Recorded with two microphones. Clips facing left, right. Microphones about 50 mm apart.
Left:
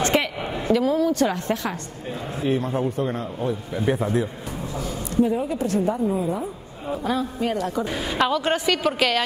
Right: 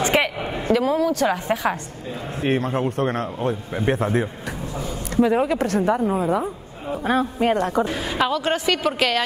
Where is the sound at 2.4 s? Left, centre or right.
Right.